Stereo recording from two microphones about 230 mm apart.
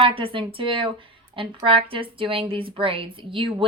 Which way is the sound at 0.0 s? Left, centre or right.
Right.